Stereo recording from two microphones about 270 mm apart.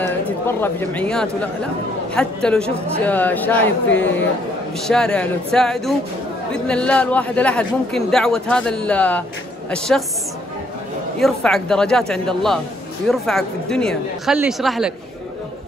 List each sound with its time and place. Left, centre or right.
0.6 s speech: centre
11.1 s speech: centre